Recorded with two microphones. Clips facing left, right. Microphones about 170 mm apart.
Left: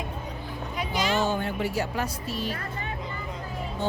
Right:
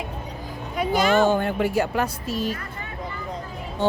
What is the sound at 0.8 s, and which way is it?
Speech, 50° right (ahead or behind).